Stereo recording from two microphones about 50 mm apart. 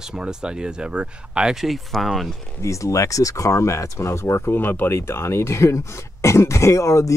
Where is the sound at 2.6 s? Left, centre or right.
Left.